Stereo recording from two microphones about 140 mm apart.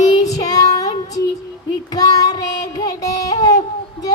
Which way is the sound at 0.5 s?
25° left (ahead or behind).